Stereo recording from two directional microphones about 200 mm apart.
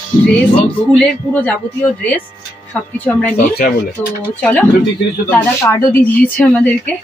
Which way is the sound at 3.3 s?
50° left (ahead or behind).